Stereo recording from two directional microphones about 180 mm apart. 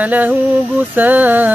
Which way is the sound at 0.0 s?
10° right (ahead or behind).